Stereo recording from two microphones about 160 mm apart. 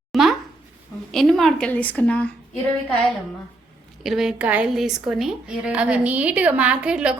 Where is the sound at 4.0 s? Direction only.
Centre (ahead or behind).